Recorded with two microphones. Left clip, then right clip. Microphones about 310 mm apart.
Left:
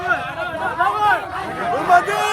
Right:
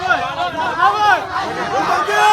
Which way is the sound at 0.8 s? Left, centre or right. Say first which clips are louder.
Right 4 dB; right.